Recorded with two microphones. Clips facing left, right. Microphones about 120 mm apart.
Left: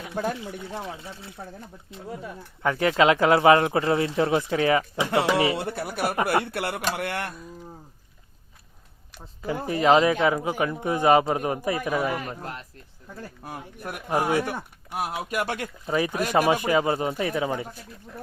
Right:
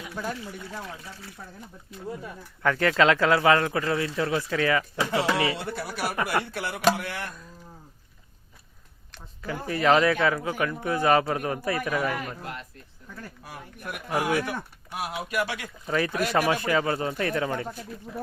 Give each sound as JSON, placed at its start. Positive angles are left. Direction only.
{"t": 0.4, "sound": "speech", "side_deg": 25}
{"t": 2.6, "sound": "speech", "side_deg": 15}
{"t": 5.5, "sound": "speech", "side_deg": 55}
{"t": 9.4, "sound": "speech", "side_deg": 20}
{"t": 14.9, "sound": "speech", "side_deg": 45}
{"t": 15.9, "sound": "speech", "side_deg": 15}
{"t": 17.2, "sound": "speech", "side_deg": 5}